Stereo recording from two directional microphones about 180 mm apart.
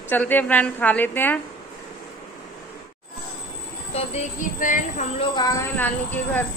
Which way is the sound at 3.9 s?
40° left (ahead or behind).